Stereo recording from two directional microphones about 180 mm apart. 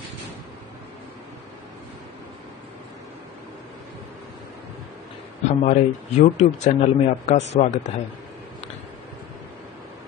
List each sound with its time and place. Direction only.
5.5 s speech: 40° left (ahead or behind)